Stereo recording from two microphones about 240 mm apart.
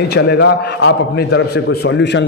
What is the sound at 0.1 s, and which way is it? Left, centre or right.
A man's voice, left.